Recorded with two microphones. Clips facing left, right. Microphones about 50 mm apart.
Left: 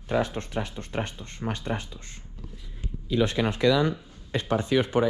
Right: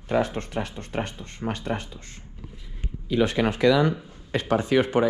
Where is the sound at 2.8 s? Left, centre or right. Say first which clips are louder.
Right 2 dB; right.